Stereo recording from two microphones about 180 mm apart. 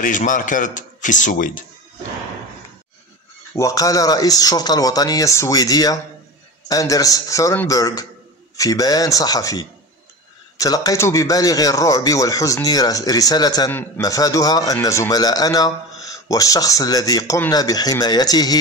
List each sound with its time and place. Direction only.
0.0 s a man's voice: 45° left (ahead or behind)
3.5 s a man's voice: 20° left (ahead or behind)